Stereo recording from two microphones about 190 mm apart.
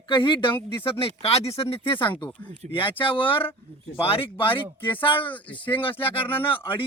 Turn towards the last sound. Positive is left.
turn(degrees=30)  # may be behind; listen again after turning